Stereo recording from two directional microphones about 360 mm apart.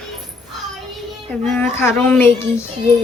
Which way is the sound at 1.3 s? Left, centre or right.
Centre.